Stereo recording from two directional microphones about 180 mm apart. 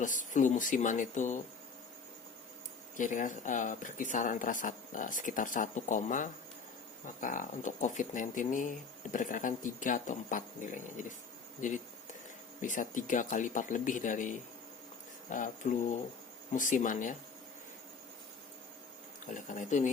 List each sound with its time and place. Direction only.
0.0 s speech: 45° left (ahead or behind)
2.9 s speech: 45° left (ahead or behind)
19.3 s speech: 45° left (ahead or behind)